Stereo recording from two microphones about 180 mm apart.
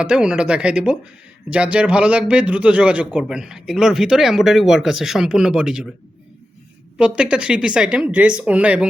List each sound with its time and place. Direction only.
0.0 s a man's voice: 5° right (ahead or behind)
6.9 s a man's voice: 5° right (ahead or behind)